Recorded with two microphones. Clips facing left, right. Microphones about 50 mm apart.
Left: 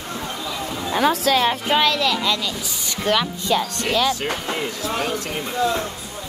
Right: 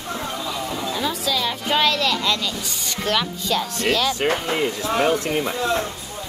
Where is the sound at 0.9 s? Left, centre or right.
Left.